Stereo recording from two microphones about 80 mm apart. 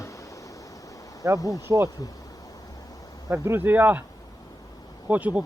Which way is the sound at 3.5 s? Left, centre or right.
Right.